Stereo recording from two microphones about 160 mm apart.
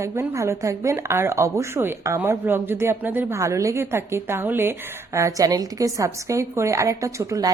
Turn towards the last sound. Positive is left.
turn(degrees=-20)  # may be behind; listen again after turning